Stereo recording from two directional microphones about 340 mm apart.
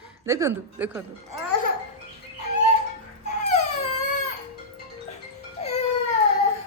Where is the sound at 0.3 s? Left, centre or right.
Centre.